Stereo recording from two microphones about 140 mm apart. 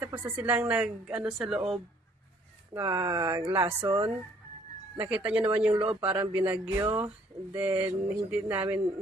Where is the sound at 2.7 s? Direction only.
20° right (ahead or behind).